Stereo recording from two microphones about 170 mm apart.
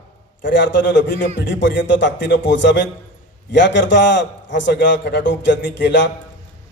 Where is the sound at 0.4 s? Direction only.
90° left.